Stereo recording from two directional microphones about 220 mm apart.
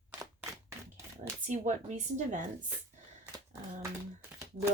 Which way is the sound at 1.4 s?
35° right (ahead or behind).